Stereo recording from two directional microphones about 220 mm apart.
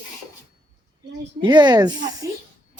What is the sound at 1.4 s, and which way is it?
Speech, 20° right (ahead or behind).